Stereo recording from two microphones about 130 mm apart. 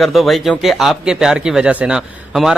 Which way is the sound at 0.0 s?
Centre (ahead or behind).